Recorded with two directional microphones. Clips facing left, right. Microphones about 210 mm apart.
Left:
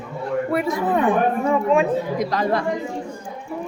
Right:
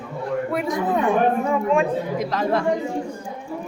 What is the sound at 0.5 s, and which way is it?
A woman's voice, centre (ahead or behind).